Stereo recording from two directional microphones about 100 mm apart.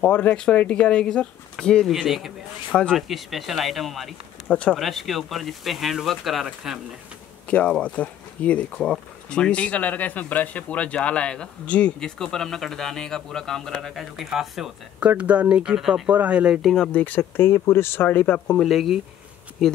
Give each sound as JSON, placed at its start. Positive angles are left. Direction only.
{"t": 0.1, "sound": "speech", "side_deg": 15}
{"t": 2.7, "sound": "speech", "side_deg": 10}
{"t": 7.4, "sound": "speech", "side_deg": 10}
{"t": 15.0, "sound": "speech", "side_deg": -15}
{"t": 16.6, "sound": "speech", "side_deg": 5}
{"t": 18.6, "sound": "speech", "side_deg": 0}